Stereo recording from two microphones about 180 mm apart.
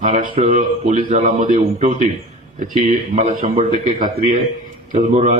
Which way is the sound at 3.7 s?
45° right (ahead or behind).